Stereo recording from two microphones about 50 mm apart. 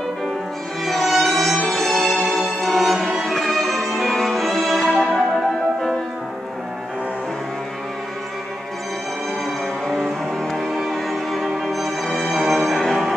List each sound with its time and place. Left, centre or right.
0.8 s music: centre
1.7 s violin: centre
9.8 s music: centre